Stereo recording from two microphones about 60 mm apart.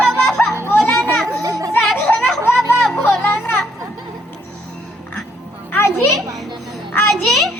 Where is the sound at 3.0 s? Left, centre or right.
Left.